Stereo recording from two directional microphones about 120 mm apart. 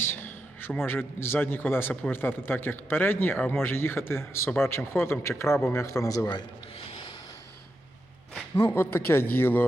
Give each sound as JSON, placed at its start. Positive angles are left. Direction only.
{"t": 0.0, "sound": "a sound", "side_deg": 20}
{"t": 0.9, "sound": "a man's voice", "side_deg": 20}
{"t": 8.5, "sound": "a man's voice", "side_deg": 20}